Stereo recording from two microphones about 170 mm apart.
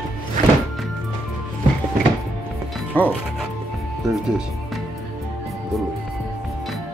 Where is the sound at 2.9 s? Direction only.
10° left (ahead or behind).